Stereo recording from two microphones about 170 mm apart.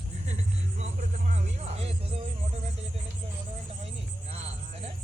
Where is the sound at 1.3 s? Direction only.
35° right (ahead or behind).